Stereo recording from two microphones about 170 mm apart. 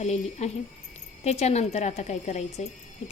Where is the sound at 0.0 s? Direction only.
40° left (ahead or behind).